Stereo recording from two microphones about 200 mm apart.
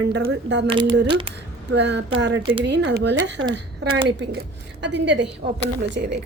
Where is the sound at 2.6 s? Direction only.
60° right (ahead or behind).